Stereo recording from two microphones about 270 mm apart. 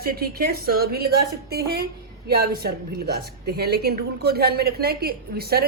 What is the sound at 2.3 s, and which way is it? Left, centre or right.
A woman's voice, right.